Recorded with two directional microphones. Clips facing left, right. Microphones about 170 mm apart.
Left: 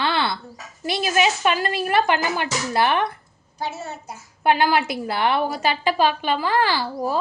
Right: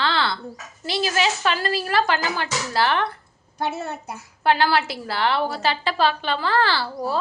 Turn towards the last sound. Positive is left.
turn(degrees=15)  # may be behind; listen again after turning